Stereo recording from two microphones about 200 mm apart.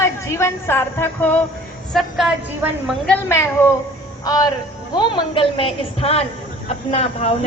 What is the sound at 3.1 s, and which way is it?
A woman's voice, 10° left (ahead or behind).